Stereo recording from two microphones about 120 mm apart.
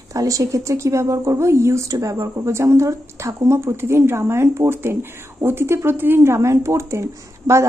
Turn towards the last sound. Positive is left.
turn(degrees=-25)  # may be behind; listen again after turning